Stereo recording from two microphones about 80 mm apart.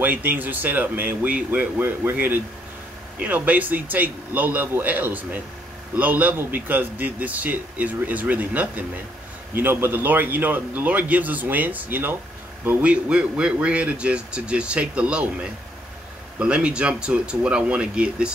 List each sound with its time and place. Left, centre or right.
0.0 s a man's voice: right
16.3 s speech: centre